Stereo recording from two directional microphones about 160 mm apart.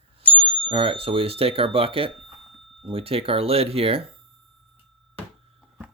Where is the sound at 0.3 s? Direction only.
35° right (ahead or behind).